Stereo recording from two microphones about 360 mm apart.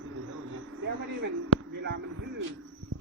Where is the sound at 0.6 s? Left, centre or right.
Right.